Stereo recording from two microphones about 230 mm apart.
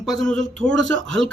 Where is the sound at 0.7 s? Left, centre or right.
Right.